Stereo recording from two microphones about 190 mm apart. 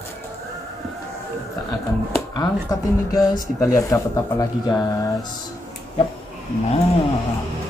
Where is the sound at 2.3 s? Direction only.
20° left (ahead or behind).